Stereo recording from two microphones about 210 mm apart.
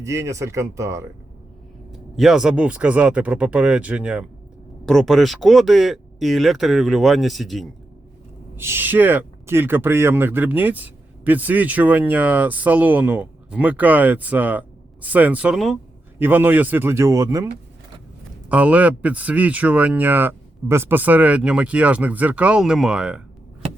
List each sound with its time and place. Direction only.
0.0 s speech: 15° right (ahead or behind)
1.9 s speech: centre (ahead or behind)
8.5 s speech: 10° right (ahead or behind)